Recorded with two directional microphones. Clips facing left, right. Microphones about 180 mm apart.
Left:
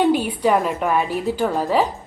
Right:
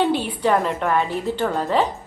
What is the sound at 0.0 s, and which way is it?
A woman's voice, 10° left (ahead or behind).